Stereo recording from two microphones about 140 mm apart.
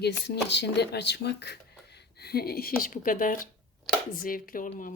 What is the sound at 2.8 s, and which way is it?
Speech, 75° left (ahead or behind).